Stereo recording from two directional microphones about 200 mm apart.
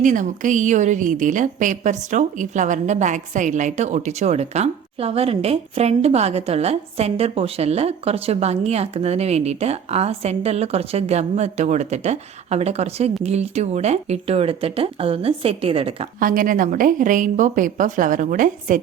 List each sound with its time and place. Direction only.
0.0 s a woman's voice: 40° right (ahead or behind)
16.2 s a woman's voice: 45° right (ahead or behind)